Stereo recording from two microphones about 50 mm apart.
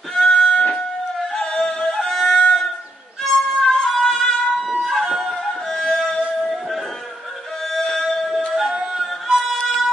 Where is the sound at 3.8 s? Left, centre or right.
Centre.